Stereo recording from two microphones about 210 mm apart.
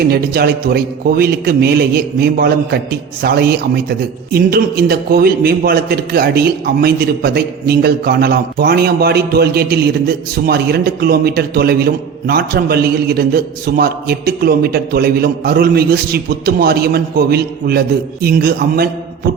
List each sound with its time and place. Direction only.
0.1 s a man's voice: 45° right (ahead or behind)